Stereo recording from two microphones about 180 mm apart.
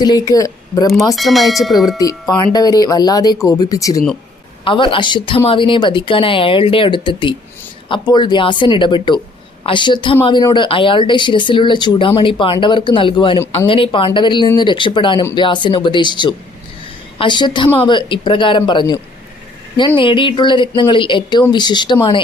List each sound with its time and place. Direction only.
0.0 s speech: 20° left (ahead or behind)
1.1 s speech: centre (ahead or behind)
2.0 s speech: 20° left (ahead or behind)
20.0 s speech: 25° left (ahead or behind)